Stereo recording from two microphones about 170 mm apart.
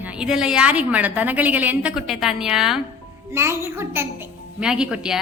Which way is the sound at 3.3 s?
15° right (ahead or behind).